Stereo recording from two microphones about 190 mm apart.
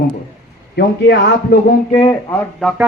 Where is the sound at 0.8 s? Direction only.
60° left (ahead or behind).